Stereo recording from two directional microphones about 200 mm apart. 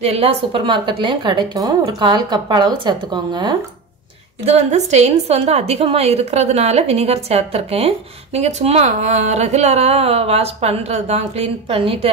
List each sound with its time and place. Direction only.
0.0 s a woman's voice: 30° right (ahead or behind)
4.5 s a woman's voice: 35° right (ahead or behind)